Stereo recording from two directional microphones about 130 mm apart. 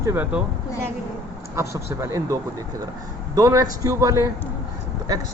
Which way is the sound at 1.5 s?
20° right (ahead or behind).